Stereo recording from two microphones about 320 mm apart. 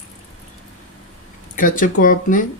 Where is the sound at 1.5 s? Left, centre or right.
Left.